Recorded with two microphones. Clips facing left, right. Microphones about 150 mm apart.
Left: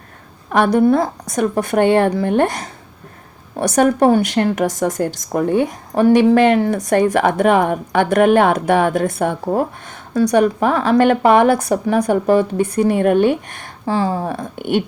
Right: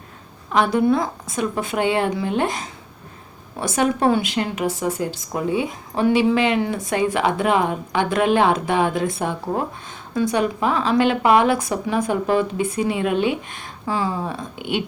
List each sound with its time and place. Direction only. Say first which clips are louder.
0.5 s a woman's voice: left 3 dB; 60° left (ahead or behind)
1.2 s a woman's voice: left 6 dB; 70° left (ahead or behind)
1.7 s a woman's voice: left 7 dB; 55° left (ahead or behind)
13.8 s a woman's voice: left 5 dB; 35° left (ahead or behind)